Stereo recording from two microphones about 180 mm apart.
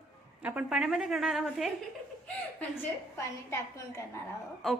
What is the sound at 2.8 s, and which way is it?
A woman's voice, 15° left (ahead or behind).